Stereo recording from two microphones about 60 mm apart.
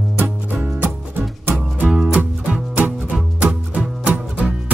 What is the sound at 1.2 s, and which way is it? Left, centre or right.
Music, right.